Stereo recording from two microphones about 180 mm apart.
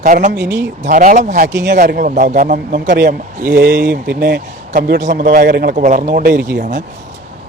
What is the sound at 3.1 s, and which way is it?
Speech, 50° right (ahead or behind).